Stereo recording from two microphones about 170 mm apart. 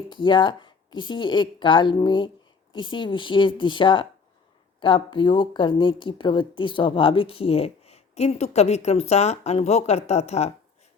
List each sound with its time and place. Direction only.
0.1 s a woman's voice: 25° left (ahead or behind)